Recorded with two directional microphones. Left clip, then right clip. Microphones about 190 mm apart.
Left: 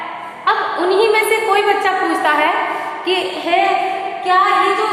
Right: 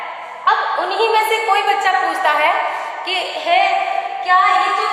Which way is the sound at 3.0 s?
10° right (ahead or behind).